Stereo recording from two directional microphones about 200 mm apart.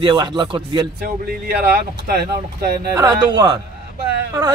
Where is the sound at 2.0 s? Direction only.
50° right (ahead or behind).